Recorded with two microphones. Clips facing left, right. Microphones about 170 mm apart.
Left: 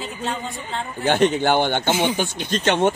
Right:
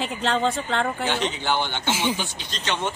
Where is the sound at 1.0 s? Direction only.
50° left (ahead or behind).